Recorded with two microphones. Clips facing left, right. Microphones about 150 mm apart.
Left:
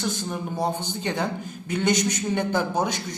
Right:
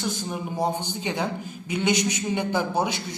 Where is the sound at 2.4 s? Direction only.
10° right (ahead or behind).